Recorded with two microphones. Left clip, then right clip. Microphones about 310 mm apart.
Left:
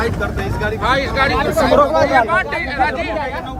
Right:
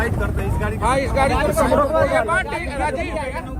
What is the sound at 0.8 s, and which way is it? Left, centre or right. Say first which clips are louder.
Speech: left 2 dB; centre.